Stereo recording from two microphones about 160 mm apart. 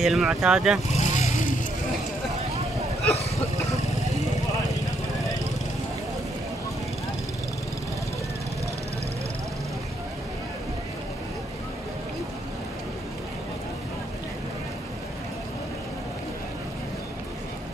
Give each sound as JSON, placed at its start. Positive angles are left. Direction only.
{"t": 0.0, "sound": "speech", "side_deg": 0}
{"t": 0.9, "sound": "vehicle", "side_deg": 45}